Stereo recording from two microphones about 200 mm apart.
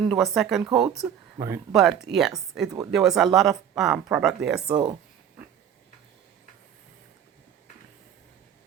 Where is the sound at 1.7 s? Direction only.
Centre (ahead or behind).